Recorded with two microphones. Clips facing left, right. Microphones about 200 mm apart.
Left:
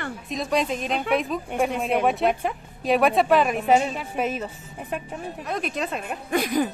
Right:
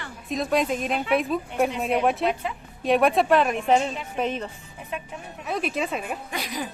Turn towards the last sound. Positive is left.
turn(degrees=50)  # may be behind; listen again after turning